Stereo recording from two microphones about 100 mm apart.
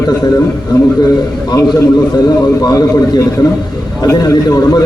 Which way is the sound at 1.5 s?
40° left (ahead or behind).